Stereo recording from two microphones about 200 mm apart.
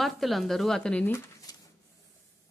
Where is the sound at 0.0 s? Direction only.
Centre (ahead or behind).